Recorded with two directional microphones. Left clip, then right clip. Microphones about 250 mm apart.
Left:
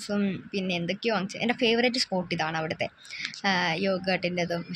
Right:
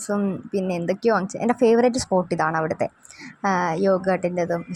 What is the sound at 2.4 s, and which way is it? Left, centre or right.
Speech, centre.